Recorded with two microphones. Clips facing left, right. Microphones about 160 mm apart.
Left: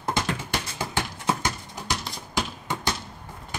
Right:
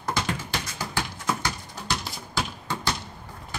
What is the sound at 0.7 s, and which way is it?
Clip-clop, 25° left (ahead or behind).